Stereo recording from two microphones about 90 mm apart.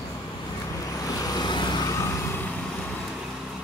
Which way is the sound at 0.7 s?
40° left (ahead or behind).